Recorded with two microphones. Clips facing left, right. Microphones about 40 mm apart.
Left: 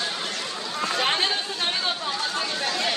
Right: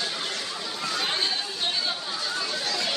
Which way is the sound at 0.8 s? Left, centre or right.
Left.